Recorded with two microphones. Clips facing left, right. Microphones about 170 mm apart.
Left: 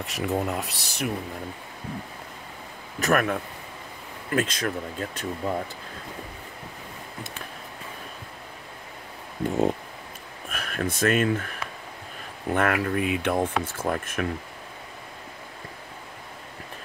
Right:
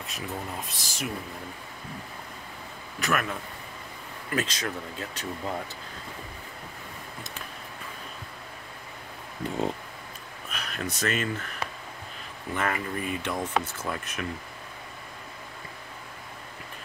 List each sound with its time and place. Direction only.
0.0 s speech: 75° left (ahead or behind)
3.0 s speech: 50° left (ahead or behind)
10.5 s speech: 50° left (ahead or behind)